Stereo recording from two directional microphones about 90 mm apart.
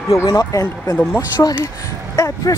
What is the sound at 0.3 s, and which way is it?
Speech, 50° left (ahead or behind).